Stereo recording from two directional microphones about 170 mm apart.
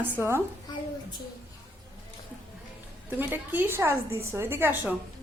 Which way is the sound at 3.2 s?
10° right (ahead or behind).